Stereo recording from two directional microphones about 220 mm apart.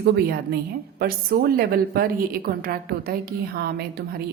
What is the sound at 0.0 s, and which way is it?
A woman's voice, 45° right (ahead or behind).